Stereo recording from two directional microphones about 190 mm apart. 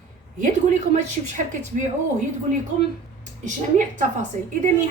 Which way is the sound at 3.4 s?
40° right (ahead or behind).